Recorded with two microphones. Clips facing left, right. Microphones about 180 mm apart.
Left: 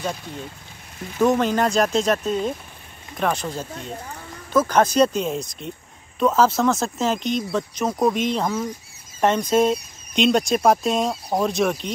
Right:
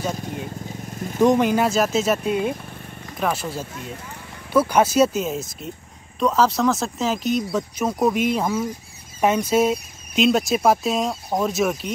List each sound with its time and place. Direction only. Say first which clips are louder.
0.9 s speech: right 3 dB; 45° right (ahead or behind)
1.2 s speech: right 2 dB; 15° right (ahead or behind)